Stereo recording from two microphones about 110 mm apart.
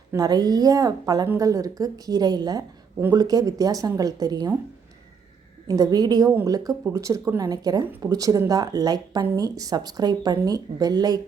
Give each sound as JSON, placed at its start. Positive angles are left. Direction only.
{"t": 0.2, "sound": "speech", "side_deg": -40}
{"t": 5.6, "sound": "speech", "side_deg": -35}